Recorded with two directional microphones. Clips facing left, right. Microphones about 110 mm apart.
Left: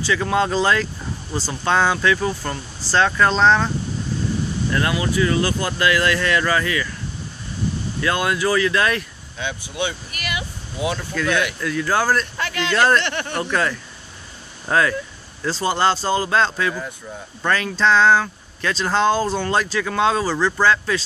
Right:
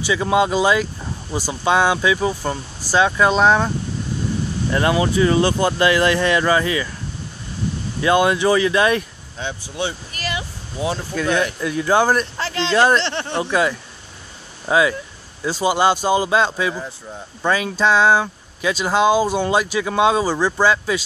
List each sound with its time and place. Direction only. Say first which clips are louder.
0.0 s speech: right 2 dB; 15° right (ahead or behind)
4.7 s speech: right 4 dB; 25° right (ahead or behind)
8.0 s speech: right 5 dB; 20° right (ahead or behind)
9.4 s speech: even; 35° right (ahead or behind)
11.7 s speech: right 3 dB; 20° right (ahead or behind)
13.4 s speech: right 3 dB; 15° right (ahead or behind)